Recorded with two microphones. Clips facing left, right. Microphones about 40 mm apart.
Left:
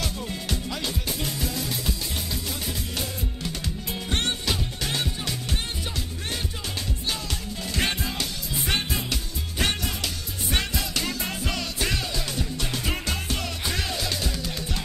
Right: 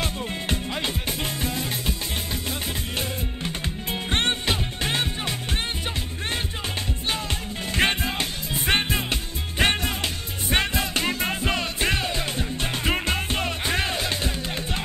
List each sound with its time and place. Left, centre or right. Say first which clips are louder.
0.0 s music: right 3 dB; right
3.0 s music: right 2 dB; right
7.1 s music: right 4 dB; right